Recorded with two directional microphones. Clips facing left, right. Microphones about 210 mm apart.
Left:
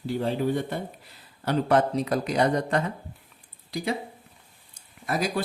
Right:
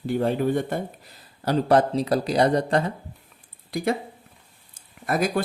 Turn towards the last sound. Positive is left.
turn(degrees=-55)  # may be behind; listen again after turning